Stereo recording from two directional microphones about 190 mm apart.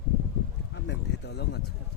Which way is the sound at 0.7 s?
65° left (ahead or behind).